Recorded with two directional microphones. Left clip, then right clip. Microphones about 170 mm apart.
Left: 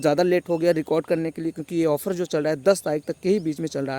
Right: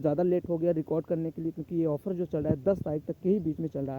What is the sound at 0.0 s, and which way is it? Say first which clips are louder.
Speech: left 7 dB; 10° left (ahead or behind).